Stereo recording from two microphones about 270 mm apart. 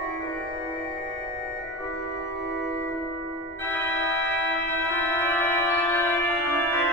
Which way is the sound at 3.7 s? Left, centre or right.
Centre.